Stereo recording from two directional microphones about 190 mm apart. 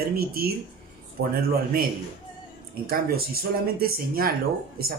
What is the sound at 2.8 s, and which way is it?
Speech, 55° right (ahead or behind).